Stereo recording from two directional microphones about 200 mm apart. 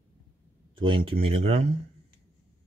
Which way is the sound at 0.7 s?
25° right (ahead or behind).